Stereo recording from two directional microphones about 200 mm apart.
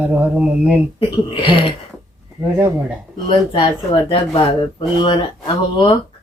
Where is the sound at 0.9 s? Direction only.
25° left (ahead or behind).